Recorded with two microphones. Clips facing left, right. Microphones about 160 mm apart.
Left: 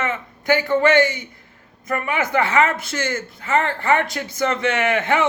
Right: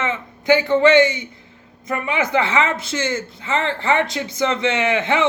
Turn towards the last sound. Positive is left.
turn(degrees=-20)  # may be behind; listen again after turning